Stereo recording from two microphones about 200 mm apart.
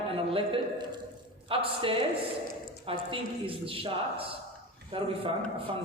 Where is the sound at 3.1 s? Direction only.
25° right (ahead or behind).